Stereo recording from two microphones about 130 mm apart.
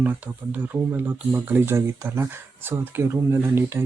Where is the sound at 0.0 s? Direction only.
15° right (ahead or behind).